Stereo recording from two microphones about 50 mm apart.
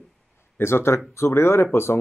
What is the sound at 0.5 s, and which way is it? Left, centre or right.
Speech, left.